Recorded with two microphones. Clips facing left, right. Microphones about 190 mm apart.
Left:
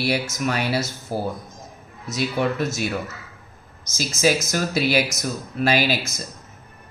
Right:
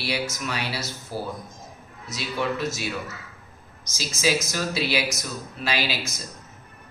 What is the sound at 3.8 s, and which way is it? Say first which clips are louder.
Speech: left 5 dB; 50° left (ahead or behind).